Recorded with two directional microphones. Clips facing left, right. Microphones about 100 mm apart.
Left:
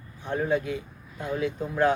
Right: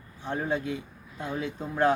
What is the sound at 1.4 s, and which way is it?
Speech, 30° right (ahead or behind).